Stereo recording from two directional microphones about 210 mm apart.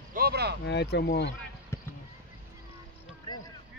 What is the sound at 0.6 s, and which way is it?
Speech, 55° left (ahead or behind).